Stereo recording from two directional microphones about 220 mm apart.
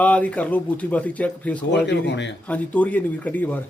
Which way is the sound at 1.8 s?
50° left (ahead or behind).